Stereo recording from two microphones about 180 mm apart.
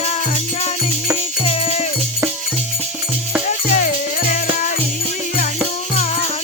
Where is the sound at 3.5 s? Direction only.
45° left (ahead or behind).